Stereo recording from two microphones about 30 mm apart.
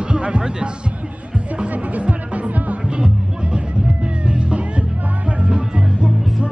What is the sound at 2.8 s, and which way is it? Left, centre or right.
Music, right.